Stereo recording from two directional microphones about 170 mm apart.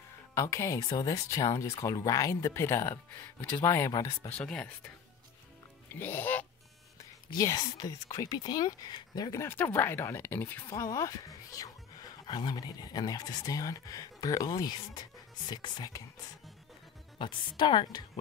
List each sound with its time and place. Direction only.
0.3 s speech: 15° left (ahead or behind)
4.3 s speech: 5° left (ahead or behind)
5.9 s speech: 10° left (ahead or behind)
7.2 s speech: 20° left (ahead or behind)
17.2 s speech: 25° left (ahead or behind)